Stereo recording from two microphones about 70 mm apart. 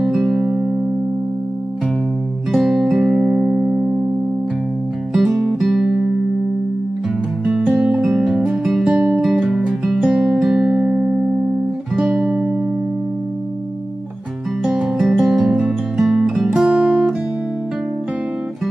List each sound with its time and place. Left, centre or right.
0.0 s music: centre
2.5 s music: centre
5.1 s music: centre
7.7 s music: centre
14.6 s music: centre